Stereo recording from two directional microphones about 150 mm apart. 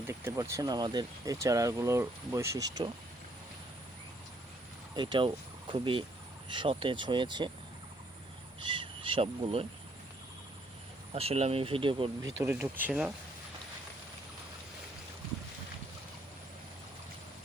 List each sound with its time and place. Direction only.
0.1 s speech: 20° right (ahead or behind)
4.9 s speech: 30° right (ahead or behind)
8.6 s speech: 35° right (ahead or behind)
11.1 s speech: 40° right (ahead or behind)
12.2 s speech: 20° right (ahead or behind)